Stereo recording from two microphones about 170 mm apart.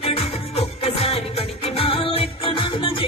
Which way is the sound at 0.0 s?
35° left (ahead or behind).